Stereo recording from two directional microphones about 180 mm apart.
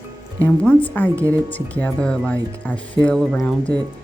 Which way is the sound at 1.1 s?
15° right (ahead or behind).